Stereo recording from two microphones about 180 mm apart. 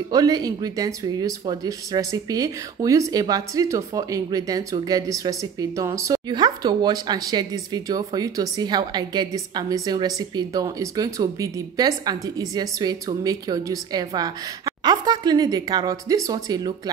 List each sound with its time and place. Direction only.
0.1 s speech: 20° right (ahead or behind)